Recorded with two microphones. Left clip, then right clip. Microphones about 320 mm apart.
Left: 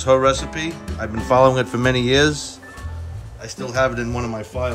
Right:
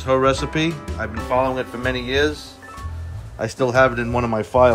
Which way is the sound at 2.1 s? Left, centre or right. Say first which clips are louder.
Left 3 dB; left.